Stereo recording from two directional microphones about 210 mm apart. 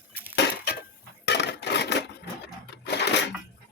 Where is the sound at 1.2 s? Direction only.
55° left (ahead or behind).